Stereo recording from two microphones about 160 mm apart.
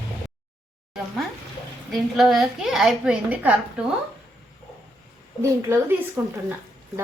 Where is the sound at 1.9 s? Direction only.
Centre (ahead or behind).